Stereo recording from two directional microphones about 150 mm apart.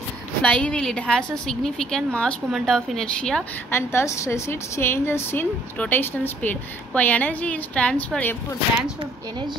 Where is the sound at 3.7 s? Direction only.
15° left (ahead or behind).